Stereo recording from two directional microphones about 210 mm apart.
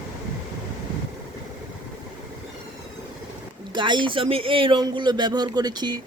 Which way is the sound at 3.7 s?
20° right (ahead or behind).